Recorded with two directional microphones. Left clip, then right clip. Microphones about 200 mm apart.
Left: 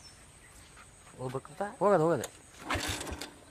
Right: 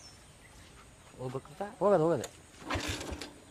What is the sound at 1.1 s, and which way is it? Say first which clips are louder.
Speech: left 2 dB; 55° left (ahead or behind).